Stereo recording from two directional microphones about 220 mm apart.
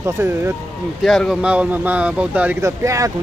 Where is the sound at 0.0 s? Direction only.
10° right (ahead or behind).